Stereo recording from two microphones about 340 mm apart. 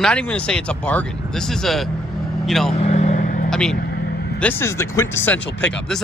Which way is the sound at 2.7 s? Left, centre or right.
Centre.